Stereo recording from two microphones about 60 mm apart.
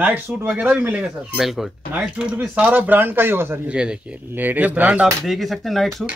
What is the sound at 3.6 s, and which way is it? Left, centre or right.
Speech, centre.